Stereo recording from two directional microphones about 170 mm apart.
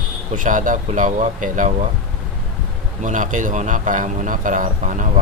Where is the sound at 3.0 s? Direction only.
45° right (ahead or behind).